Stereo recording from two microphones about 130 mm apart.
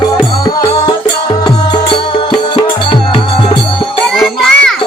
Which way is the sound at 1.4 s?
35° left (ahead or behind).